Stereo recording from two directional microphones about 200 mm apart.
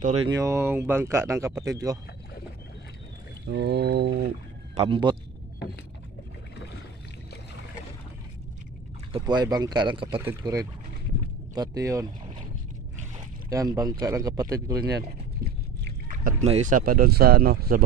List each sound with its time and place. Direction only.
0.3 s speech: 15° right (ahead or behind)
3.4 s a sound: 55° right (ahead or behind)
4.7 s speech: 25° right (ahead or behind)
9.1 s speech: 20° right (ahead or behind)
13.5 s speech: 15° right (ahead or behind)
14.8 s speech: 50° right (ahead or behind)
16.1 s speech: 40° right (ahead or behind)